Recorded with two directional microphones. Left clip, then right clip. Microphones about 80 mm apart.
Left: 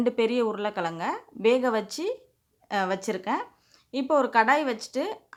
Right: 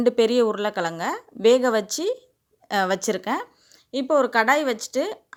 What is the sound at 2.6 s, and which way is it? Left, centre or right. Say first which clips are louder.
Speech: right 5 dB; right.